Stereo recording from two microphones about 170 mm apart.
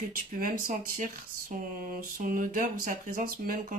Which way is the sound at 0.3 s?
55° right (ahead or behind).